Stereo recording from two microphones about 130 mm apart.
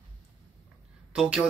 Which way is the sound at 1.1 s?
5° right (ahead or behind).